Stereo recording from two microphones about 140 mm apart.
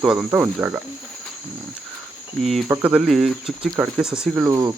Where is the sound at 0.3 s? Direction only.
15° right (ahead or behind).